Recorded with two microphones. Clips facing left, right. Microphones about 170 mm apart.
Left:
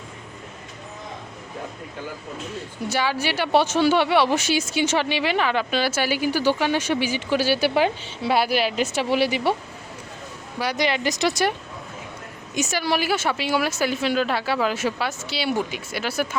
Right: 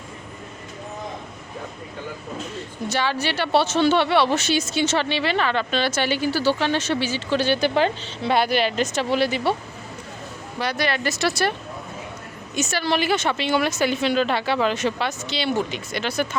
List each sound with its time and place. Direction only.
2.9 s speech: 10° left (ahead or behind)
10.6 s speech: 15° left (ahead or behind)
12.5 s speech: 15° left (ahead or behind)